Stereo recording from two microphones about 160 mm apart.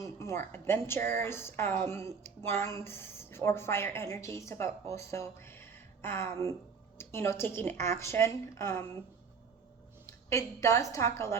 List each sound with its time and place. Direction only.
0.0 s a woman's voice: 20° left (ahead or behind)
10.1 s a woman's voice: 20° left (ahead or behind)